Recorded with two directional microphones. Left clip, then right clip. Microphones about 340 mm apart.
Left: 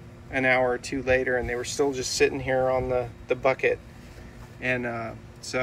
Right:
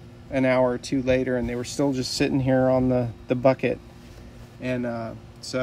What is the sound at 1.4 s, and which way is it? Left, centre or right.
Speech, centre.